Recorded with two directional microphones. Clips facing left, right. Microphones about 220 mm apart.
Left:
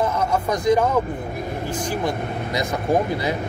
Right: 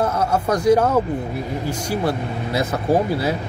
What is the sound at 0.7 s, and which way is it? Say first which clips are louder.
Speech: right 3 dB; 10° right (ahead or behind).